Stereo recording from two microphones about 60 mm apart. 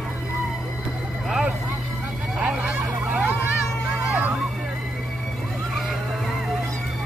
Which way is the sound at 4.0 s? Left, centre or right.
Right.